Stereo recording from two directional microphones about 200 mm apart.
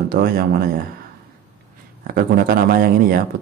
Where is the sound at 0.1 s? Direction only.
50° right (ahead or behind).